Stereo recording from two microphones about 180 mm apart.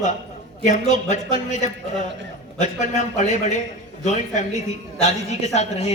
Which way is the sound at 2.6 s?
40° left (ahead or behind).